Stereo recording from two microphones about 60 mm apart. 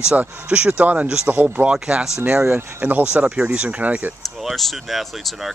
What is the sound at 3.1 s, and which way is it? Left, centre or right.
Speech, centre.